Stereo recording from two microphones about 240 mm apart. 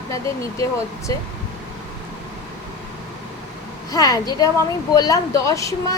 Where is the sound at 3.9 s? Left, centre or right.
Centre.